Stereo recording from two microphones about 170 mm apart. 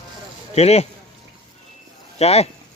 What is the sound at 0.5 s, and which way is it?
Speech, 40° left (ahead or behind).